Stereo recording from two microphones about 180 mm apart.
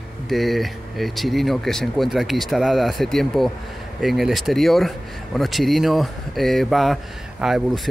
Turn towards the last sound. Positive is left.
turn(degrees=0)  # may be behind; listen again after turning